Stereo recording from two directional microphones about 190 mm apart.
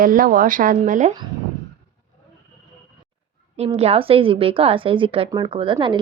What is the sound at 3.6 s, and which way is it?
A woman's voice, 35° right (ahead or behind).